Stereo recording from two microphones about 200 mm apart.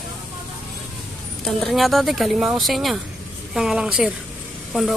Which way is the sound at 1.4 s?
Centre (ahead or behind).